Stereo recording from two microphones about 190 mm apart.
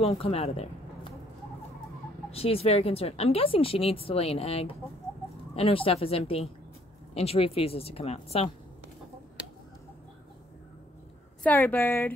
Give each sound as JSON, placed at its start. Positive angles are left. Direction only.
{"t": 0.0, "sound": "speech", "side_deg": 30}
{"t": 2.3, "sound": "speech", "side_deg": 30}
{"t": 11.4, "sound": "a woman's voice", "side_deg": 10}